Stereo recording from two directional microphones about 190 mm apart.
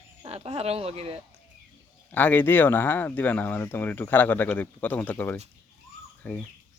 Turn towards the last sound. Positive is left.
turn(degrees=10)  # may be behind; listen again after turning